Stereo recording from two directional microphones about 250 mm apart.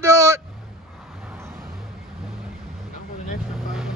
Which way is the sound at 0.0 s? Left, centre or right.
Centre.